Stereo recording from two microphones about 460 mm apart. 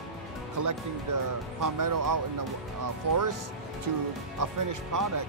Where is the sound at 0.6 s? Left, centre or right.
Right.